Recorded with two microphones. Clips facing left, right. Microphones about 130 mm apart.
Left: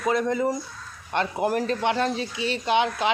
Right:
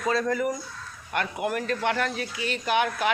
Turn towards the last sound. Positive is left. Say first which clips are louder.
# left 2 dB
turn(degrees=25)  # may be behind; listen again after turning